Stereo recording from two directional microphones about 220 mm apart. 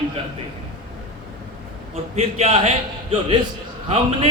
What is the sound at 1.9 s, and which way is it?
Speech, 30° right (ahead or behind).